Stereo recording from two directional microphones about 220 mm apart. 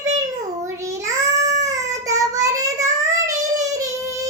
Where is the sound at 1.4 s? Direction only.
30° right (ahead or behind).